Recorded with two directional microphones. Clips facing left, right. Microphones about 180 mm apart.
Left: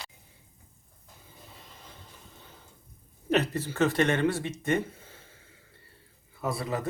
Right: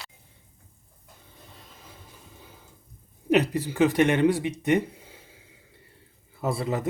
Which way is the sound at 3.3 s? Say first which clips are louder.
Right 4 dB; 15° right (ahead or behind).